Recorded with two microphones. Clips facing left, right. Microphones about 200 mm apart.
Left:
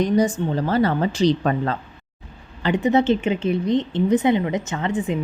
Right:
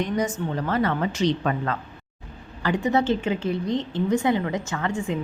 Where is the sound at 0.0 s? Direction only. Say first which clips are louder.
Left 6 dB; 35° left (ahead or behind).